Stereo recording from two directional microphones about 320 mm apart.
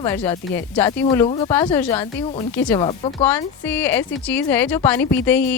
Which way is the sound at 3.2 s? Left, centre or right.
Centre.